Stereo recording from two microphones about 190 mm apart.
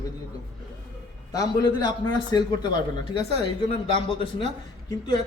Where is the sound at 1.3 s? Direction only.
20° left (ahead or behind).